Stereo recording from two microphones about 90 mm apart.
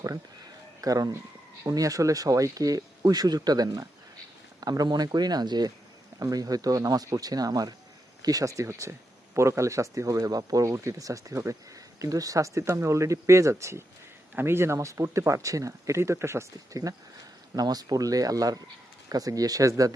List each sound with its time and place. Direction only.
0.8 s speech: 40° right (ahead or behind)